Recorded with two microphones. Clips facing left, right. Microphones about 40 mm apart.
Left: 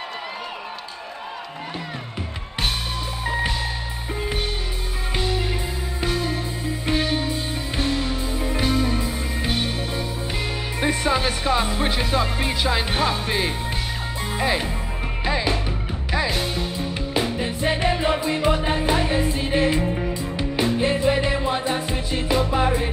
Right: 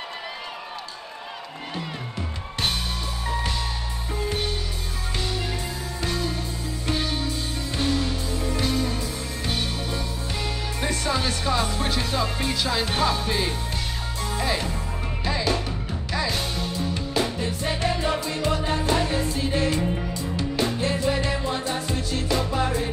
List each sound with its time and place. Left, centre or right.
4.1 s music: left